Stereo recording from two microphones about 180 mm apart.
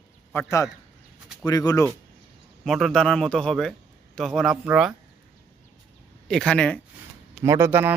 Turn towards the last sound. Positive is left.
turn(degrees=-10)  # may be behind; listen again after turning